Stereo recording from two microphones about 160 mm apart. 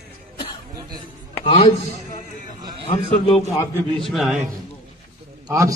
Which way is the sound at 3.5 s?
20° left (ahead or behind).